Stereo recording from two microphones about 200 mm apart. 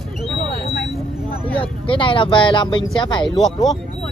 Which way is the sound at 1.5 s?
25° left (ahead or behind).